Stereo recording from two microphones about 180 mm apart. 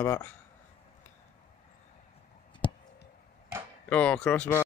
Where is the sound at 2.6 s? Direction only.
25° left (ahead or behind).